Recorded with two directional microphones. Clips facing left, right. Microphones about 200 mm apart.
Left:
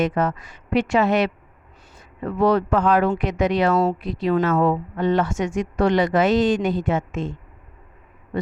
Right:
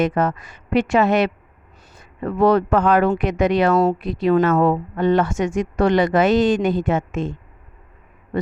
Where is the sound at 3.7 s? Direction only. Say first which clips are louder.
Right 3 dB; 40° right (ahead or behind).